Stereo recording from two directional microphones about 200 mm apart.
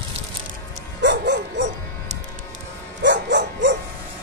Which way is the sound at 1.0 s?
60° right (ahead or behind).